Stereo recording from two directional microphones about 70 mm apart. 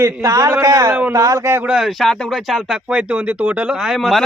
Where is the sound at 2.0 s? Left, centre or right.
Centre.